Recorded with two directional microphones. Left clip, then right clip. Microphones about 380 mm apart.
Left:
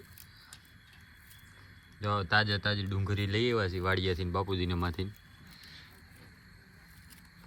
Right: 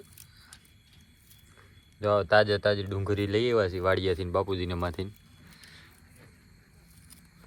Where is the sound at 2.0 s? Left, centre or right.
Centre.